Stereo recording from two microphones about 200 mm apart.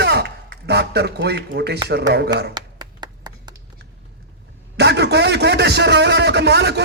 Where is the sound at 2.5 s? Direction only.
20° right (ahead or behind).